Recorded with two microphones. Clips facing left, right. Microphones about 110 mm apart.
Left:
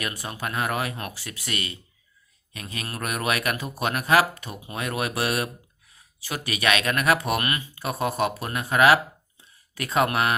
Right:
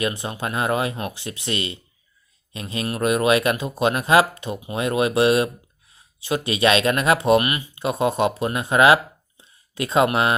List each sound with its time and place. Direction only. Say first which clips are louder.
0.0 s speech: right 6 dB; 25° right (ahead or behind)